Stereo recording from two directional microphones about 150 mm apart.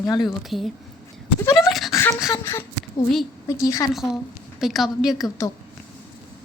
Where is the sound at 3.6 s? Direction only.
20° left (ahead or behind).